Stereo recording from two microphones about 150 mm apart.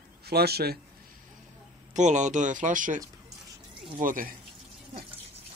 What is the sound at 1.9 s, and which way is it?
Speech, 55° right (ahead or behind).